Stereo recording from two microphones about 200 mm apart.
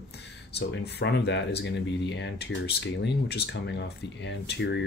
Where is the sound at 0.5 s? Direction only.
55° left (ahead or behind).